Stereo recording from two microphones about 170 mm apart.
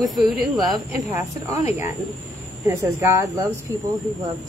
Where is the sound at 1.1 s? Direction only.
20° right (ahead or behind).